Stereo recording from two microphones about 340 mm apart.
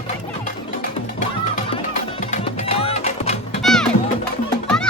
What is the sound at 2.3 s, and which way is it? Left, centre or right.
Music, centre.